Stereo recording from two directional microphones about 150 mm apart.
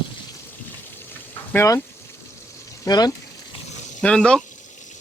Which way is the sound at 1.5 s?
20° left (ahead or behind).